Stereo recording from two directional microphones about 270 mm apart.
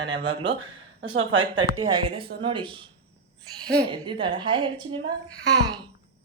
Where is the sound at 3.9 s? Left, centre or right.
Centre.